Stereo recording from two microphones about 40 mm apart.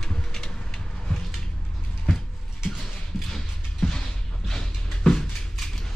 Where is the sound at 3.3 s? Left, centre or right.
Centre.